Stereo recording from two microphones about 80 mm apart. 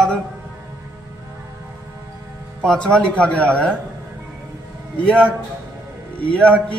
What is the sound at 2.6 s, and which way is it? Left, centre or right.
Speech, centre.